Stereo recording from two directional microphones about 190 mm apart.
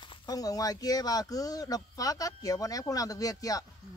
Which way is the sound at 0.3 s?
20° left (ahead or behind).